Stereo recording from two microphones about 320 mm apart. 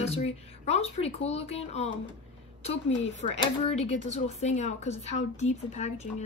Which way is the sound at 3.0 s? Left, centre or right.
Centre.